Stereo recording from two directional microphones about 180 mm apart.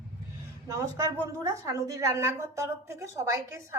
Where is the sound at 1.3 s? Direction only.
20° right (ahead or behind).